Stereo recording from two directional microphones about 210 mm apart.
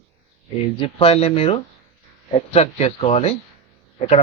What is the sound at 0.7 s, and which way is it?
Speech, 25° left (ahead or behind).